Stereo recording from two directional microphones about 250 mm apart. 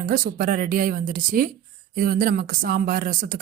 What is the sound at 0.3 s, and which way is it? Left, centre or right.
Speech, right.